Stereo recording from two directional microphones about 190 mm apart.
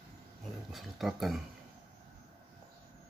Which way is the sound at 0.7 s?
Centre (ahead or behind).